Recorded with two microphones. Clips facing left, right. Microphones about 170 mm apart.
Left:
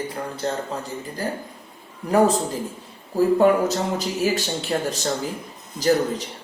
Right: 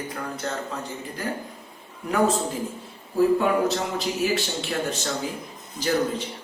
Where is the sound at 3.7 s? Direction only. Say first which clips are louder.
Left 2 dB; 40° left (ahead or behind).